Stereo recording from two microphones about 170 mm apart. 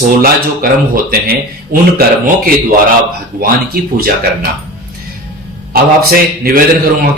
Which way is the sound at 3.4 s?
60° right (ahead or behind).